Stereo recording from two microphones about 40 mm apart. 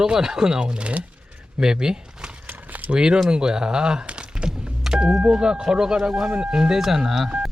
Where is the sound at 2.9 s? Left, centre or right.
Right.